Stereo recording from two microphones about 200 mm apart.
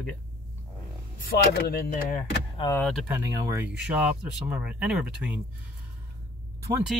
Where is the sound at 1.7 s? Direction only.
45° left (ahead or behind).